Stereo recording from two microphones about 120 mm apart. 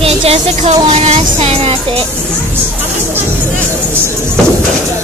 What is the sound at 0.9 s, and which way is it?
Music, 65° right (ahead or behind).